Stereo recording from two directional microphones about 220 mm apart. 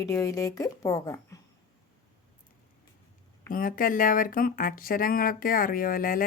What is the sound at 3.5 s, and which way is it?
Speech, 40° left (ahead or behind).